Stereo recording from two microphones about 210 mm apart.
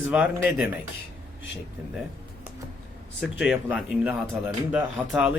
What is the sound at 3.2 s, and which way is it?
Speech, 5° right (ahead or behind).